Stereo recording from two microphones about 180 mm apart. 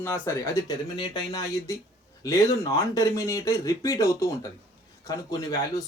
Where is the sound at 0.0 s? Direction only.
15° left (ahead or behind).